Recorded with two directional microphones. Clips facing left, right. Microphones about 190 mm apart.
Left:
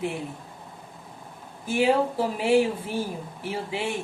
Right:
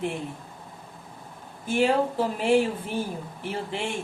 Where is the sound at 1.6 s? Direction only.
10° left (ahead or behind).